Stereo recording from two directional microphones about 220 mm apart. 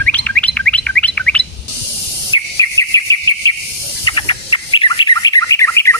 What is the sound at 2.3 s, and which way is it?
Insect, 15° left (ahead or behind).